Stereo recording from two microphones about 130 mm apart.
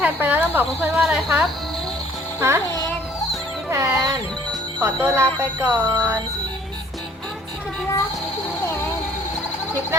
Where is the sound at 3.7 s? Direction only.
25° right (ahead or behind).